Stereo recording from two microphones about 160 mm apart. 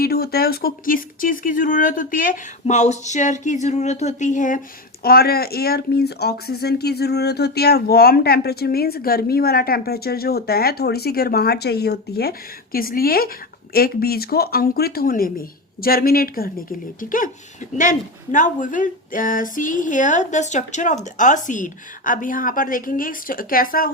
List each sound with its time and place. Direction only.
0.0 s speech: 75° left (ahead or behind); by 4.6 s 55° left (ahead or behind)
5.0 s speech: 70° left (ahead or behind)